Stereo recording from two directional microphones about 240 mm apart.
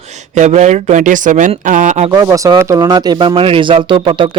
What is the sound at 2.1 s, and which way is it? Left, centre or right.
A man's voice, centre.